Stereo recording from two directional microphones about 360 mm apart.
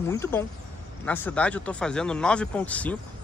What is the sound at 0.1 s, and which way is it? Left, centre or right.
Speech, centre.